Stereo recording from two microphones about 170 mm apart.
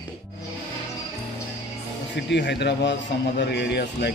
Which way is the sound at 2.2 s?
90° left.